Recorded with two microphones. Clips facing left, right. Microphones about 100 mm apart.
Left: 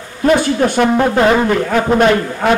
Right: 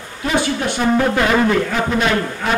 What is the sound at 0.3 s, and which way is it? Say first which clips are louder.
Speech: left 6 dB; 45° left (ahead or behind).